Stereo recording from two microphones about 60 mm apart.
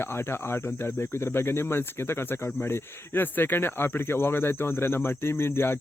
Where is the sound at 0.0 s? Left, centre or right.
Left.